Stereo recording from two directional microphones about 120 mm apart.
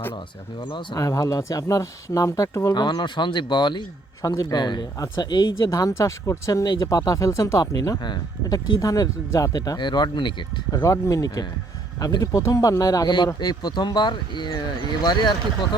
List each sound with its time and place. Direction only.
0.6 s speech: 40° left (ahead or behind)
0.9 s speech: 30° left (ahead or behind)
2.8 s speech: 40° left (ahead or behind)